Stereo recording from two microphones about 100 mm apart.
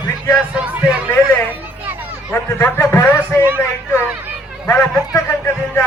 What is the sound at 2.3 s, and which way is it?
A man's voice, 25° left (ahead or behind).